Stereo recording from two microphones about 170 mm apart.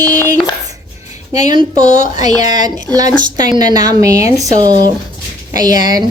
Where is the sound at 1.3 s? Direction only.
20° right (ahead or behind).